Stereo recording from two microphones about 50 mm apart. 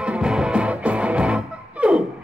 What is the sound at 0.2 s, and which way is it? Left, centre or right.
Music, centre.